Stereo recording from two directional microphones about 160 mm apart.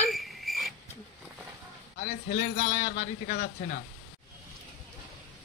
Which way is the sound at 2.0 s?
55° left (ahead or behind).